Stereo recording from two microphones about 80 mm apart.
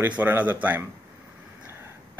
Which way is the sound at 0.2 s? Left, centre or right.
Right.